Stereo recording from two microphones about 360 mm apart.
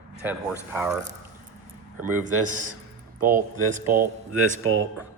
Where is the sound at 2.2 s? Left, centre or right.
Right.